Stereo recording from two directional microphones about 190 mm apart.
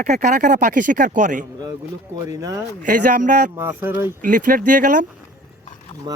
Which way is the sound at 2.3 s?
15° right (ahead or behind).